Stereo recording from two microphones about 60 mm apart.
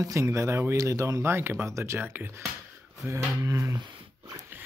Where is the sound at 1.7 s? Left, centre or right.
Right.